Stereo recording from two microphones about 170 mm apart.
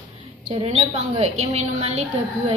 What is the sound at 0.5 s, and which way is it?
A woman's voice, 35° right (ahead or behind).